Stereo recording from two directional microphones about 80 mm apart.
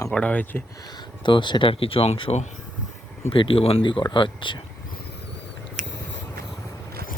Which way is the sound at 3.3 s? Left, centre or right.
Left.